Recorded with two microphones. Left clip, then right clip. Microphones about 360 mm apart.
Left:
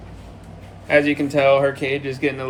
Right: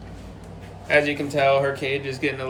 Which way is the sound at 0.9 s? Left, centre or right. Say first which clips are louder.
Left 3 dB; centre.